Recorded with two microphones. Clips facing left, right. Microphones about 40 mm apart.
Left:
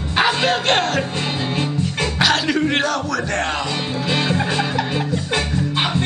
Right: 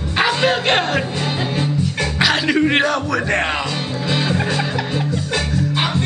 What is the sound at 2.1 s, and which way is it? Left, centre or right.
Music, centre.